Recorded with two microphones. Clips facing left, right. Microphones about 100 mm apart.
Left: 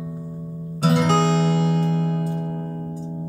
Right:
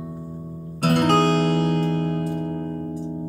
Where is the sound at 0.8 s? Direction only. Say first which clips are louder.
Right 1 dB; 55° right (ahead or behind).